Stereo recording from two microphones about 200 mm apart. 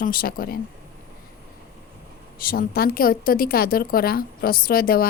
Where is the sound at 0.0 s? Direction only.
45° left (ahead or behind).